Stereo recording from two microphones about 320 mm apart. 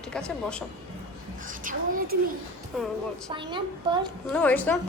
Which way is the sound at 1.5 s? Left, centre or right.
Right.